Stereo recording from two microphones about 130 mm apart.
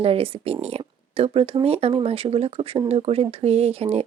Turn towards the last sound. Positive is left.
turn(degrees=-50)  # may be behind; listen again after turning